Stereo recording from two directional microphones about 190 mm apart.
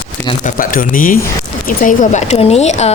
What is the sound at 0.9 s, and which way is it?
Speech, 45° left (ahead or behind).